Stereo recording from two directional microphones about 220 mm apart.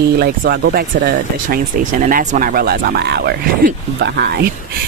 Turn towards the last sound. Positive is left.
turn(degrees=-45)  # may be behind; listen again after turning